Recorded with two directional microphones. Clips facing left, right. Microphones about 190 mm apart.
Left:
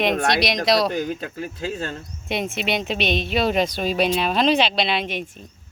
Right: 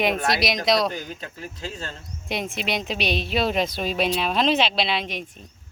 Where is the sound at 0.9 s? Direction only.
45° left (ahead or behind).